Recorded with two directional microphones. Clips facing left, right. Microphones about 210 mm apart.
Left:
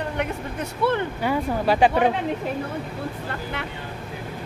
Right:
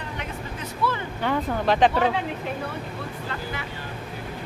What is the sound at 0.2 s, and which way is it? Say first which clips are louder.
Speech: left 6 dB; 60° left (ahead or behind).